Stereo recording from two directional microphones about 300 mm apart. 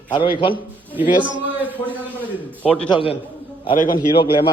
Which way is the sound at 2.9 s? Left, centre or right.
Centre.